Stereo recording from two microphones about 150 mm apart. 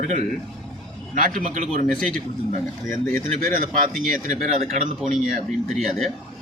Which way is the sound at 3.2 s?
65° right (ahead or behind).